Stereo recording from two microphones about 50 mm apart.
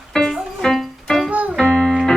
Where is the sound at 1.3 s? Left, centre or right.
Right.